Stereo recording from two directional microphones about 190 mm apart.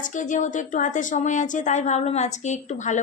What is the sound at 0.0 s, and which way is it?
A woman's voice, 40° left (ahead or behind).